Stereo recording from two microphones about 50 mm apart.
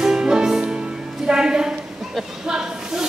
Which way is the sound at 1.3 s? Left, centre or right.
Centre.